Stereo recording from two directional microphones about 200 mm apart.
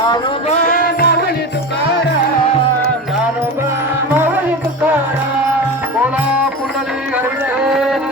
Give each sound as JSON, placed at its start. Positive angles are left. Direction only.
{"t": 0.5, "sound": "music", "side_deg": 40}